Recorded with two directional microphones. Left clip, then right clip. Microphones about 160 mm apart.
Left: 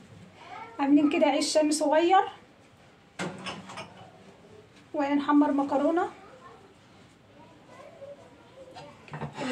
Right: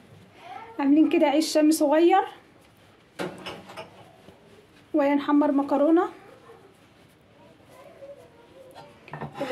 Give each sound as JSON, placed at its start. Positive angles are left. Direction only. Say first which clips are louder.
{"t": 0.7, "sound": "a woman's voice", "louder": "right 3 dB", "side_deg": -45}
{"t": 4.9, "sound": "a woman's voice", "louder": "right 3 dB", "side_deg": -55}